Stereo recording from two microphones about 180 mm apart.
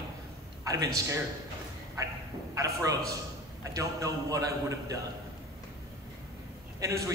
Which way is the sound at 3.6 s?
15° right (ahead or behind).